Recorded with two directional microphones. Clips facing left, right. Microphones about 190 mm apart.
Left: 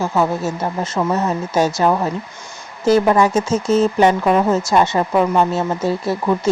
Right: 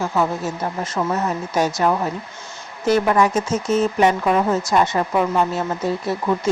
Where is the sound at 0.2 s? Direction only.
25° left (ahead or behind).